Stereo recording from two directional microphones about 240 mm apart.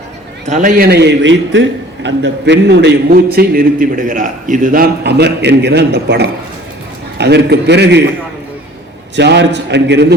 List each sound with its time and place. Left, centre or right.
0.5 s a man's voice: right
9.1 s a man's voice: right